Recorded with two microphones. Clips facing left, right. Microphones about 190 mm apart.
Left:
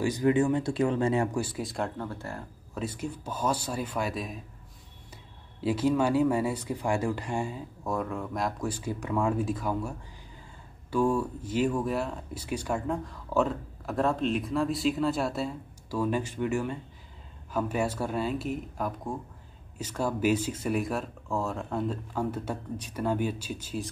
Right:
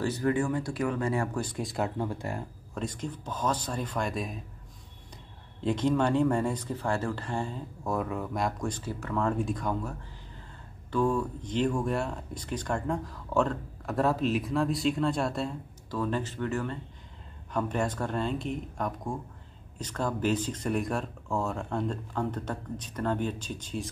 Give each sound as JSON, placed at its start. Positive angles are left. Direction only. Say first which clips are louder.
{"t": 0.0, "sound": "speech", "louder": "left 3 dB", "side_deg": 15}
{"t": 1.3, "sound": "speech", "louder": "left 1 dB", "side_deg": 5}
{"t": 2.0, "sound": "speech", "louder": "right 4 dB", "side_deg": -15}
{"t": 2.7, "sound": "speech", "louder": "left 1 dB", "side_deg": 5}
{"t": 5.6, "sound": "speech", "louder": "left 1 dB", "side_deg": 5}
{"t": 7.8, "sound": "speech", "louder": "even", "side_deg": 0}